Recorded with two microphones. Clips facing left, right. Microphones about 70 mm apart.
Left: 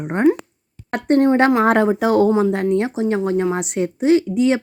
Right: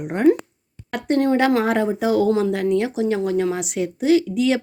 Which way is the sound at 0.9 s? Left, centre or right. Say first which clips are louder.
Left 4 dB; left.